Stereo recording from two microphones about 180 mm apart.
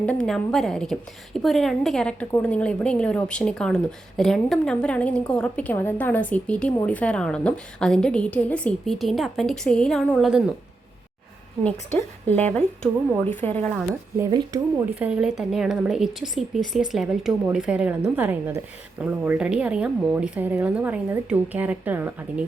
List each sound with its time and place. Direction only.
0.0 s a woman's voice: 5° left (ahead or behind)
11.6 s a woman's voice: 10° left (ahead or behind)
14.2 s speech: 20° right (ahead or behind)
14.9 s speech: 5° right (ahead or behind)